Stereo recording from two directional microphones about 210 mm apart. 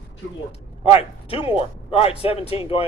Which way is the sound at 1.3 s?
25° left (ahead or behind).